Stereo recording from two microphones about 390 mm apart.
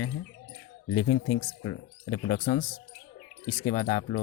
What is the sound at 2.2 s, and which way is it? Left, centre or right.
Speech, left.